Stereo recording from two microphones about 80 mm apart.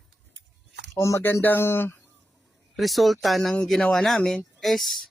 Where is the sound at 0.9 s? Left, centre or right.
Left.